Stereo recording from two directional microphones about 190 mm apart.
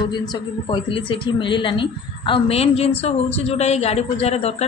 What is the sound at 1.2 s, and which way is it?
A woman's voice, 25° left (ahead or behind).